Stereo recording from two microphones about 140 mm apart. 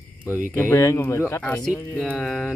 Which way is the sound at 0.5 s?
20° left (ahead or behind).